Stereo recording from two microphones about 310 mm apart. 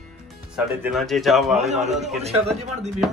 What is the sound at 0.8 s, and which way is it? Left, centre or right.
Speech, centre.